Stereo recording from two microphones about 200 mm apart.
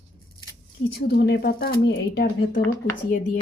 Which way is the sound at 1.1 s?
55° left (ahead or behind).